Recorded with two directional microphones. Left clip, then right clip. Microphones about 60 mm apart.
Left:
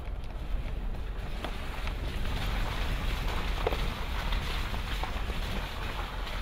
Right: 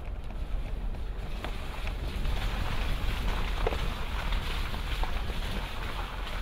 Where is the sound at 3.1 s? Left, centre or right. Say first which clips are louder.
Even; left.